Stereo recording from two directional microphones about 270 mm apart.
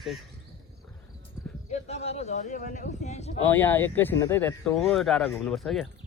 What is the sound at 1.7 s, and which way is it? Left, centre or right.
Speech, left.